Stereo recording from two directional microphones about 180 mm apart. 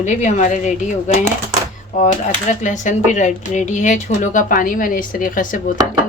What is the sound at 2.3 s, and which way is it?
Speech, 45° left (ahead or behind).